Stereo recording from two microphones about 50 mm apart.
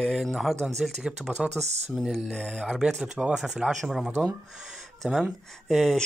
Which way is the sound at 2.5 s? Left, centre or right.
Centre.